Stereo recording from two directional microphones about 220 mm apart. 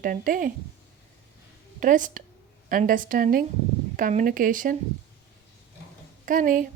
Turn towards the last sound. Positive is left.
turn(degrees=-35)  # may be behind; listen again after turning